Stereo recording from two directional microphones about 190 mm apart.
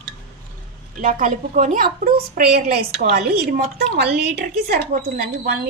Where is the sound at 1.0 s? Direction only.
45° right (ahead or behind).